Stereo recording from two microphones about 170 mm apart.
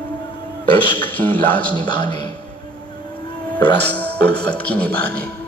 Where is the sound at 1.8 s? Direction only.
25° left (ahead or behind).